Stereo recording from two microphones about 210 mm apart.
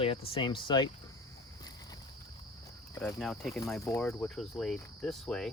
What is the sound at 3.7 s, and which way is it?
Speech, 10° left (ahead or behind).